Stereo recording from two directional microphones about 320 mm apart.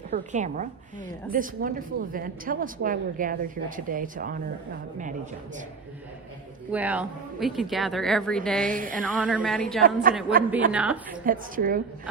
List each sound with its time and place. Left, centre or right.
0.3 s a woman's voice: right
6.7 s speech: centre
8.6 s a woman's voice: right
9.0 s speech: centre
9.8 s a woman's voice: right
10.7 s speech: centre
11.1 s a woman's voice: right